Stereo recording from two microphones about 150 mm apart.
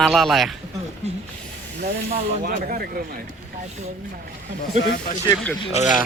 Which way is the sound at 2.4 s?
70° right (ahead or behind).